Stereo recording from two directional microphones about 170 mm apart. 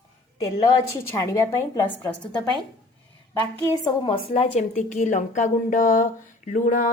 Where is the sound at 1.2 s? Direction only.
20° left (ahead or behind).